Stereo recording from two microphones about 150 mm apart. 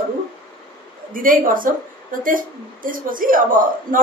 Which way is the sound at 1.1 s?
65° right (ahead or behind).